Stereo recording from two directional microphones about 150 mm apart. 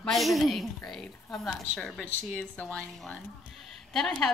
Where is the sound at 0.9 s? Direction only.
Centre (ahead or behind).